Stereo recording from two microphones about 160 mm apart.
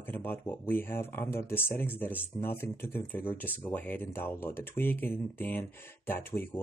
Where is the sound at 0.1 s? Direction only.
10° left (ahead or behind).